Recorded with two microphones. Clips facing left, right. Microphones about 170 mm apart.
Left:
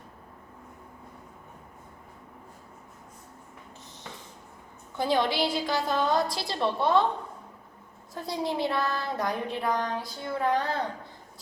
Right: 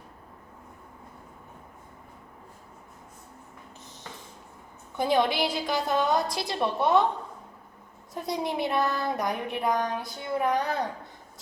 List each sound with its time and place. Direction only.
4.9 s a woman's voice: 20° right (ahead or behind)
8.1 s a woman's voice: 20° right (ahead or behind)